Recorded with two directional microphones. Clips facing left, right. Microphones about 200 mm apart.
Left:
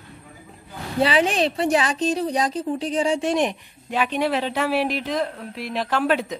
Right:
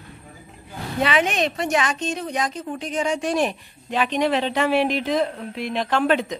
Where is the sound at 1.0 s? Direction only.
30° left (ahead or behind).